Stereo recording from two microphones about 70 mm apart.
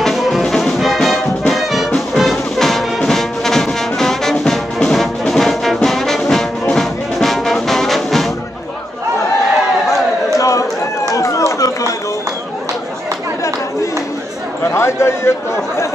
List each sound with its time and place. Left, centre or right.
0.0 s music: centre
0.4 s music: centre
1.5 s brass instrument: centre
2.1 s music: centre
5.2 s brass instrument: centre
10.3 s run: left
14.6 s chatter: left